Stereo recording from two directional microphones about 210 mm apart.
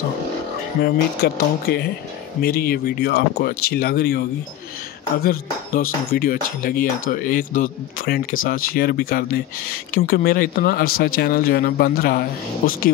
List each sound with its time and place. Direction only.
0.8 s speech: 50° left (ahead or behind)